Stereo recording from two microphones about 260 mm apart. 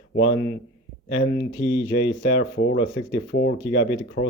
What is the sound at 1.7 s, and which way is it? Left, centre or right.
Speech, left.